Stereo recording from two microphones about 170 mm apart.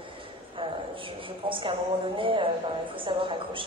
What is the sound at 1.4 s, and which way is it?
A woman's voice, 30° right (ahead or behind).